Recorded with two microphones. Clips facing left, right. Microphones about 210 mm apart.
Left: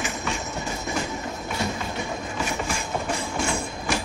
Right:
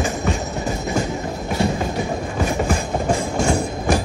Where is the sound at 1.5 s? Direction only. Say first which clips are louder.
Right 9 dB; 40° right (ahead or behind).